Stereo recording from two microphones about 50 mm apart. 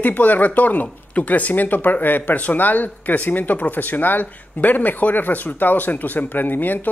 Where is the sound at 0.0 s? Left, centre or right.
Left.